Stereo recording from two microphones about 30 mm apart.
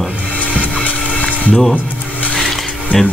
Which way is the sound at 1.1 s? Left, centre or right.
Left.